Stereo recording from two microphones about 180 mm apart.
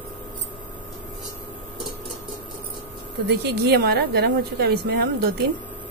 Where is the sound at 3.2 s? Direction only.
70° right (ahead or behind).